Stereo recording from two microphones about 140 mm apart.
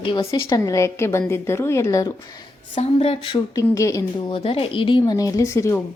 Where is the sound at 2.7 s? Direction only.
45° left (ahead or behind).